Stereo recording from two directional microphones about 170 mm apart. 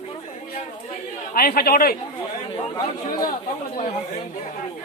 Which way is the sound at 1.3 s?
60° left (ahead or behind).